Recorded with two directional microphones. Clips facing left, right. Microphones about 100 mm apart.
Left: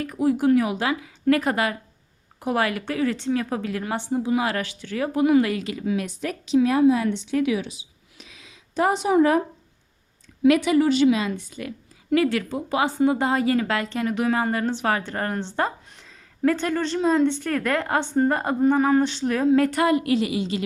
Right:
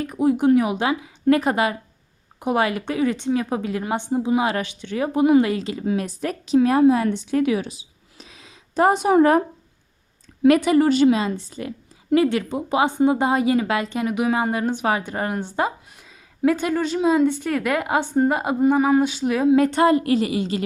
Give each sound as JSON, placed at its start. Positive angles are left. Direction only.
{"t": 0.0, "sound": "a woman's voice", "side_deg": -20}
{"t": 10.4, "sound": "a woman's voice", "side_deg": -45}